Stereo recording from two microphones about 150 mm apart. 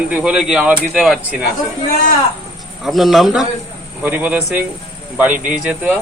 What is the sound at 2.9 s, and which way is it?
A man's voice, centre (ahead or behind).